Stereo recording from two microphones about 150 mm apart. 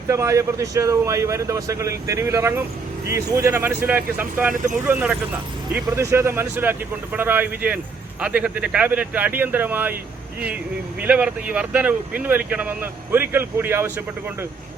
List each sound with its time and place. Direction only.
0.1 s speech: 20° right (ahead or behind)
11.0 s speech: 10° right (ahead or behind)